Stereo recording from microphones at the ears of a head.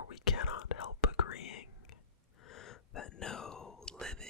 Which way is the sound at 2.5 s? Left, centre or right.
Left.